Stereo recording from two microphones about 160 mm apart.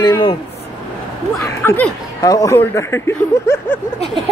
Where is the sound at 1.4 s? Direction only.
15° left (ahead or behind).